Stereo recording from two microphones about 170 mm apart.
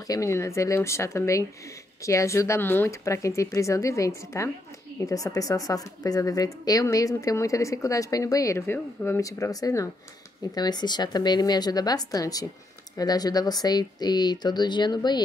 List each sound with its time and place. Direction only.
0.1 s speech: 15° left (ahead or behind)